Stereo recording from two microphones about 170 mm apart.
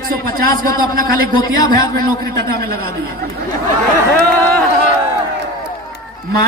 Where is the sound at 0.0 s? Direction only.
60° right (ahead or behind).